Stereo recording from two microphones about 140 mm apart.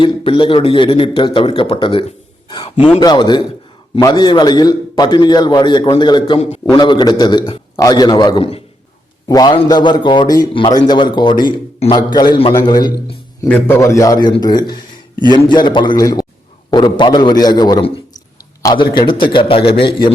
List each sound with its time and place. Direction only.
0.0 s a man's voice: 35° left (ahead or behind)
3.0 s a man's voice: 30° left (ahead or behind)
13.5 s a man's voice: 15° left (ahead or behind)
15.1 s a man's voice: 30° right (ahead or behind)
15.4 s a man's voice: 35° left (ahead or behind)